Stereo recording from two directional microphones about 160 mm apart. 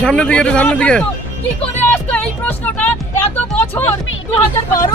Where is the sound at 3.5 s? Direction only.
15° left (ahead or behind).